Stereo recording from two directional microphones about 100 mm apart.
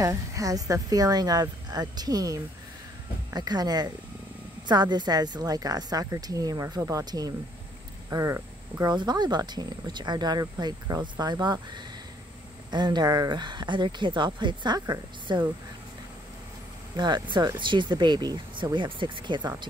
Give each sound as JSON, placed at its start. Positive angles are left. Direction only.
{"t": 0.0, "sound": "a woman's voice", "side_deg": -35}
{"t": 8.8, "sound": "speech", "side_deg": -45}
{"t": 16.9, "sound": "speech", "side_deg": -50}